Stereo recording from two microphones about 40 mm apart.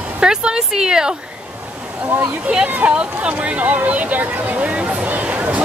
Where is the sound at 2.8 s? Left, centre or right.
Right.